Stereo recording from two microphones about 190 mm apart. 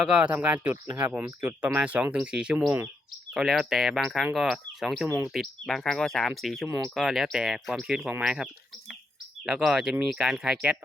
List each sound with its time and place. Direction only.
0.1 s speech: 5° right (ahead or behind)
5.0 s speech: 15° right (ahead or behind)
5.3 s speech: centre (ahead or behind)
9.5 s speech: 5° right (ahead or behind)